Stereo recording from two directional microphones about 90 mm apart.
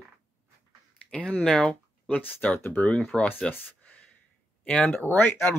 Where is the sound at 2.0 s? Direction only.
20° left (ahead or behind).